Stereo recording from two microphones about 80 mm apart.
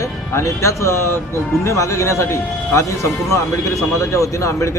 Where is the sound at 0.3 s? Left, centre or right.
Left.